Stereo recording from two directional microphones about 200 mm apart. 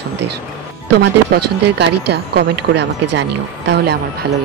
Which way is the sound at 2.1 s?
55° right (ahead or behind).